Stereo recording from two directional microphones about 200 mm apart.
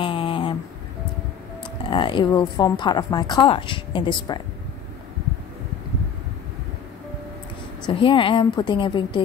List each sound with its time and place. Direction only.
0.0 s a sound: 25° left (ahead or behind)
1.9 s speech: 25° left (ahead or behind)
7.8 s speech: 25° left (ahead or behind)